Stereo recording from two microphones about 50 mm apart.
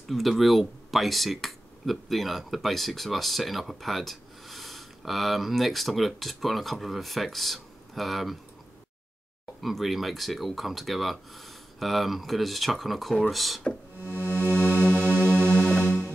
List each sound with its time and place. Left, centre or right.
0.1 s speech: centre
9.6 s speech: centre
13.9 s music: right